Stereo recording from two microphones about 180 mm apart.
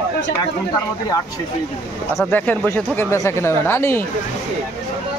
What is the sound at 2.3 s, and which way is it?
Speech, 10° left (ahead or behind).